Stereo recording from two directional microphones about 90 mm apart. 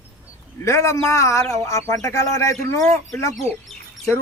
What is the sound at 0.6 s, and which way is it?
Speech, 35° left (ahead or behind).